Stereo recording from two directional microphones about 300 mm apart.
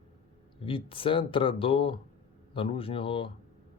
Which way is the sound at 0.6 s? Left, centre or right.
Centre.